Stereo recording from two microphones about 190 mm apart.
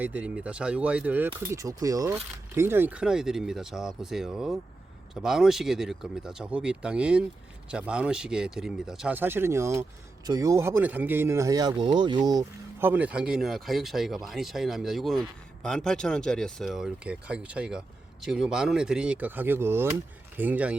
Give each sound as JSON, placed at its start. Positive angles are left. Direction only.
{"t": 0.0, "sound": "speech", "side_deg": -5}
{"t": 12.9, "sound": "speech", "side_deg": -5}